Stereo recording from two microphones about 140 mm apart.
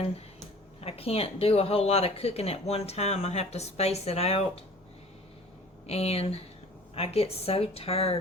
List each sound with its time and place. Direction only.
0.8 s speech: 45° left (ahead or behind)
5.8 s speech: 45° left (ahead or behind)